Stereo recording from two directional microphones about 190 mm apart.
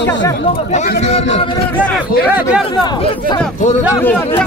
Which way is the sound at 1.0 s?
35° left (ahead or behind).